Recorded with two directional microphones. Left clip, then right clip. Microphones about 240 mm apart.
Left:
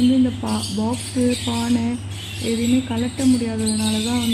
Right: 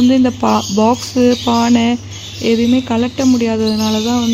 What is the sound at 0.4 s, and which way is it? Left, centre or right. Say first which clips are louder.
Speech: right 12 dB; right.